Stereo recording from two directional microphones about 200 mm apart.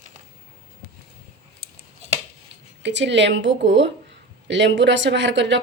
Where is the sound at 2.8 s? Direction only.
65° right (ahead or behind).